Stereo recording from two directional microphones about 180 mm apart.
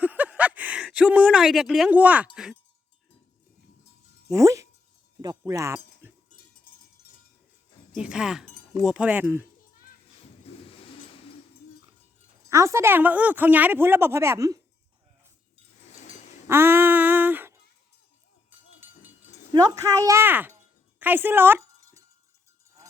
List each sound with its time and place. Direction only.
0.0 s a sound: 10° right (ahead or behind)
4.3 s speech: 15° right (ahead or behind)
5.2 s wind chime: 20° right (ahead or behind)
7.9 s speech: 5° right (ahead or behind)
10.5 s vehicle: 35° left (ahead or behind)
12.5 s a woman's voice: 15° right (ahead or behind)
15.8 s a sound: 40° left (ahead or behind)
16.5 s a sound: 15° right (ahead or behind)
19.5 s a woman's voice: 20° right (ahead or behind)
21.0 s wind chime: 10° right (ahead or behind)